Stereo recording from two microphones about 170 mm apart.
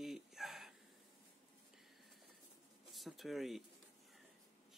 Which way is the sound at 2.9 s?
Centre (ahead or behind).